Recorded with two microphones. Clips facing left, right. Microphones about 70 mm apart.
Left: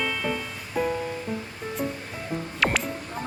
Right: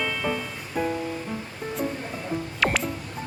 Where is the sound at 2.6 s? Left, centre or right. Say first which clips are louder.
Even; centre.